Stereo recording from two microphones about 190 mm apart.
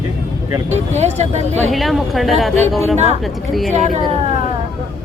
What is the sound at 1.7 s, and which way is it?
A woman's voice, centre (ahead or behind).